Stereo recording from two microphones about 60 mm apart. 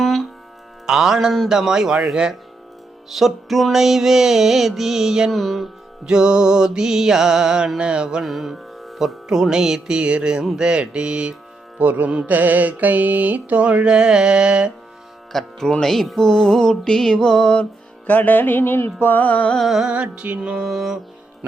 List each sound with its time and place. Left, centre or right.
0.0 s music: centre
0.9 s music: centre
5.3 s music: centre
6.1 s music: centre
8.2 s music: centre
11.8 s mantra: right
13.8 s music: centre
15.3 s music: centre
18.0 s music: left
19.1 s music: left
19.5 s music: centre
19.8 s mantra: centre
20.4 s music: centre
20.7 s music: centre